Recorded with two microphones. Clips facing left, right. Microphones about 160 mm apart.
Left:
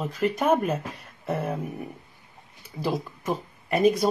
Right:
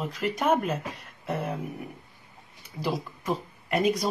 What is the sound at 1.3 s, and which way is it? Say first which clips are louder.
Speech: left 2 dB; centre (ahead or behind).